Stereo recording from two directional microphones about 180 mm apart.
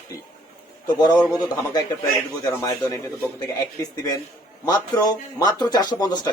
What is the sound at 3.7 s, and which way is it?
Speech, 20° left (ahead or behind).